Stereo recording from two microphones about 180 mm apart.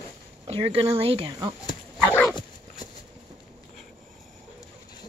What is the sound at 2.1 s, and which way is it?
Dog, 10° left (ahead or behind).